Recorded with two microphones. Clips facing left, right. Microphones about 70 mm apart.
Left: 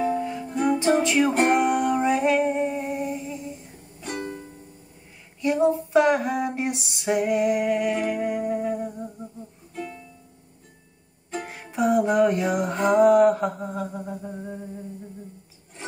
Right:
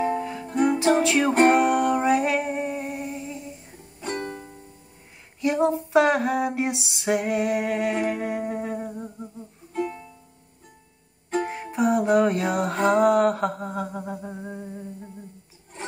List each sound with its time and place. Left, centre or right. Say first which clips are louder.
0.7 s music: even; centre
4.0 s music: right 1 dB; right
5.4 s female singing: left 1 dB; centre
6.0 s a sound: even; centre
7.9 s music: even; right
8.3 s humming: left 3 dB; centre
9.8 s music: right 6 dB; right
11.7 s music: even; centre
12.9 s a sound: left 4 dB; centre